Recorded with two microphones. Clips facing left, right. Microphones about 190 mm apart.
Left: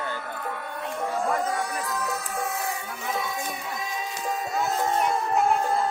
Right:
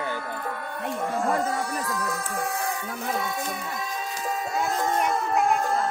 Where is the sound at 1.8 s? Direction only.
Centre (ahead or behind).